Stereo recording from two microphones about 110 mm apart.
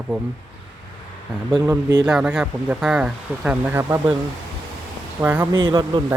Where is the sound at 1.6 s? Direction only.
35° right (ahead or behind).